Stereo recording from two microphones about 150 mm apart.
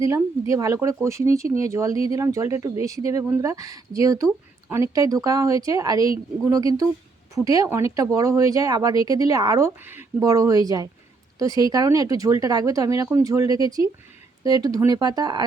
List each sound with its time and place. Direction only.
0.0 s speech: 20° right (ahead or behind)
10.2 s speech: 25° right (ahead or behind)